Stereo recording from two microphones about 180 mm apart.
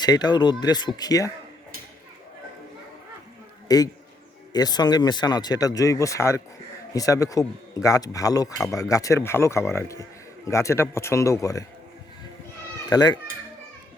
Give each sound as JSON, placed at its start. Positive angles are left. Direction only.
{"t": 0.0, "sound": "speech", "side_deg": 20}
{"t": 3.7, "sound": "a man's voice", "side_deg": 20}
{"t": 12.9, "sound": "speech", "side_deg": 20}